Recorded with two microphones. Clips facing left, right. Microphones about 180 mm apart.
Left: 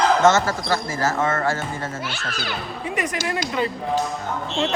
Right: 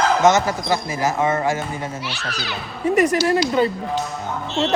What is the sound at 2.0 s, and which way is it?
Speech, 50° left (ahead or behind).